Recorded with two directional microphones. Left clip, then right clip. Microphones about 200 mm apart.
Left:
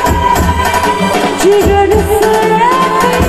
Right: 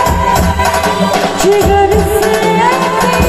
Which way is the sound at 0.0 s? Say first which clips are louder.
Left 1 dB; 35° left (ahead or behind).